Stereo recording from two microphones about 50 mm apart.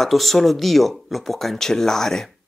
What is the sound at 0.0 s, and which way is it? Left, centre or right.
Speech, centre.